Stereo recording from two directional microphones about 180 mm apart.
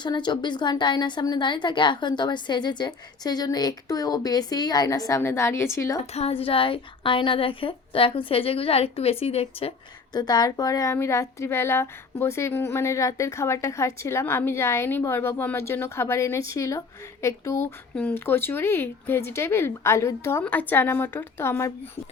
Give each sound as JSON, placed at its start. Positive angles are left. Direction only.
{"t": 0.0, "sound": "a woman's voice", "side_deg": 25}
{"t": 6.1, "sound": "a woman's voice", "side_deg": 35}